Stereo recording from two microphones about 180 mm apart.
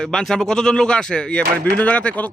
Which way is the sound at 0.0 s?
5° left (ahead or behind).